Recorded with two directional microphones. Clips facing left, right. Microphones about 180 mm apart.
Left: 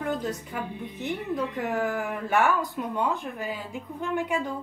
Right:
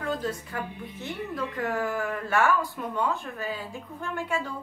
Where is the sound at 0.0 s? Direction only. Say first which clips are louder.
Left 1 dB; 20° left (ahead or behind).